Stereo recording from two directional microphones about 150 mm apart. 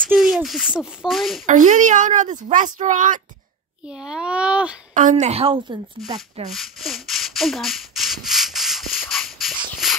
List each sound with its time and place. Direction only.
0.1 s speech: centre (ahead or behind)
1.4 s a woman's voice: 55° right (ahead or behind)
3.8 s a child's voice: 5° right (ahead or behind)
5.2 s a woman's voice: 40° right (ahead or behind)
6.5 s rub: centre (ahead or behind)
9.1 s a sound: centre (ahead or behind)